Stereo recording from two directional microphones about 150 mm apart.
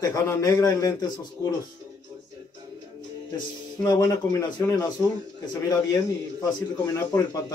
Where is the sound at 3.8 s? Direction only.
20° left (ahead or behind).